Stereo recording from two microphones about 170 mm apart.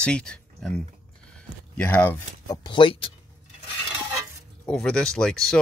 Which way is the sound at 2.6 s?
30° left (ahead or behind).